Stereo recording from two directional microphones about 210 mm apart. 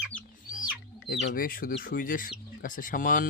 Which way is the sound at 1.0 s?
45° left (ahead or behind).